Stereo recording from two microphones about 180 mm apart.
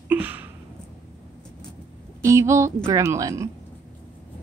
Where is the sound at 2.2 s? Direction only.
15° right (ahead or behind).